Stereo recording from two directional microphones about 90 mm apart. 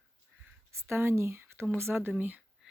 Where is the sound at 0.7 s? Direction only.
30° right (ahead or behind).